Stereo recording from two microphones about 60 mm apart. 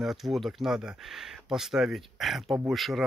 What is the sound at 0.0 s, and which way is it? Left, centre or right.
Speech, centre.